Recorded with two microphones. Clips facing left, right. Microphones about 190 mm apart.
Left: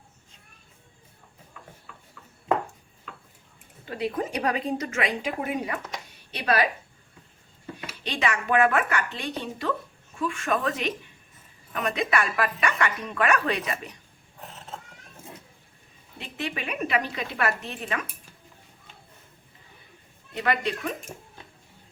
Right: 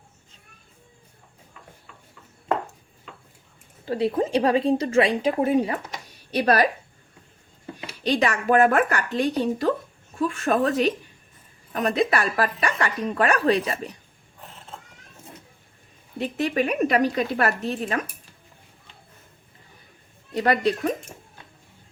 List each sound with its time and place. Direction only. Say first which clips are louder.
3.8 s speech: right 6 dB; 30° right (ahead or behind)
7.9 s speech: right 6 dB; 40° right (ahead or behind)
16.1 s speech: right 10 dB; 40° right (ahead or behind)
20.3 s speech: right 6 dB; 40° right (ahead or behind)